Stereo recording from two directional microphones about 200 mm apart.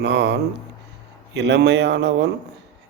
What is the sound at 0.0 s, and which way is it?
A man's voice, 60° right (ahead or behind).